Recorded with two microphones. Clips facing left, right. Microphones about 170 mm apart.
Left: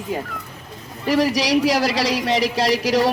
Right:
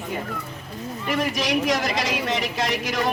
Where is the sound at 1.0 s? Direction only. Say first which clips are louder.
Left 6 dB; 35° left (ahead or behind).